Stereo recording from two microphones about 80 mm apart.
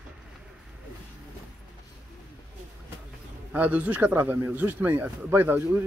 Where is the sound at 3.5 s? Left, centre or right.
Centre.